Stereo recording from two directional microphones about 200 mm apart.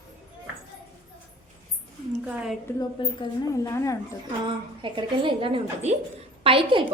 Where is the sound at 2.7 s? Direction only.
15° left (ahead or behind).